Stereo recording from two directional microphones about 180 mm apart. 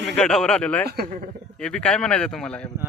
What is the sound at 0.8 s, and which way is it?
Speech, 60° right (ahead or behind).